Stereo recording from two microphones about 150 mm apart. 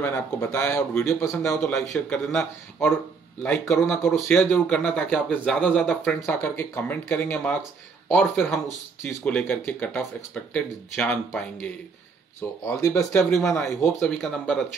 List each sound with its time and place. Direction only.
0.0 s speech: 15° left (ahead or behind)
1.7 s speech: centre (ahead or behind)
12.4 s speech: 20° left (ahead or behind)
13.2 s speech: centre (ahead or behind)